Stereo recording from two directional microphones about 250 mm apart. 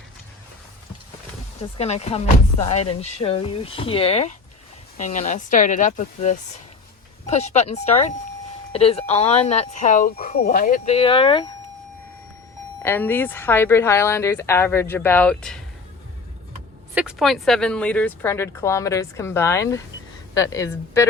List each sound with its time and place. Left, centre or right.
1.8 s speech: left
12.8 s speech: centre
16.9 s speech: centre